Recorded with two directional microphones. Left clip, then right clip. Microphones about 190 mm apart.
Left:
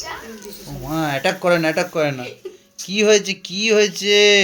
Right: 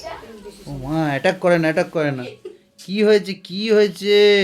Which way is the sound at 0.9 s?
30° right (ahead or behind).